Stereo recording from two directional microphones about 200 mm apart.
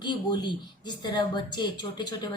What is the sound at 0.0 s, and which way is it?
Speech, 20° left (ahead or behind).